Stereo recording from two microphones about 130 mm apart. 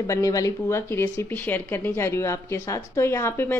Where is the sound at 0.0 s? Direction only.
25° left (ahead or behind).